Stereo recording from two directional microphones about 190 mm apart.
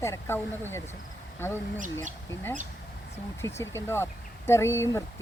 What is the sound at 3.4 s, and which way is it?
A woman's voice, 15° left (ahead or behind).